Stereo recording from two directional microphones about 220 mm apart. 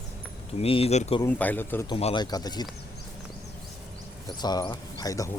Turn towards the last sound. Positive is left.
turn(degrees=15)  # may be behind; listen again after turning